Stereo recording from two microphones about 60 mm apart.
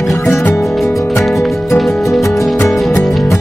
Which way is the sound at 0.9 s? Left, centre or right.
Left.